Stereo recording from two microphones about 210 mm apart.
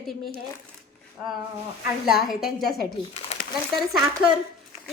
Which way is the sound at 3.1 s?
30° left (ahead or behind).